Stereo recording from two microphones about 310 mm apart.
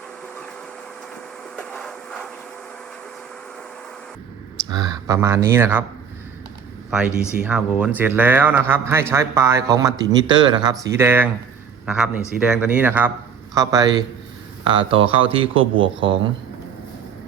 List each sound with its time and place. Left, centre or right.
1.5 s a sound: centre
4.7 s speech: centre
6.9 s speech: centre